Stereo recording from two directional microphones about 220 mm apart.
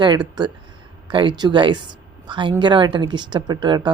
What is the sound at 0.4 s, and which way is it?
Speech, 20° right (ahead or behind).